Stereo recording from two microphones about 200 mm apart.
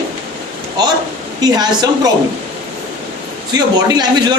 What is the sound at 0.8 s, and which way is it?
A man's voice, 20° right (ahead or behind).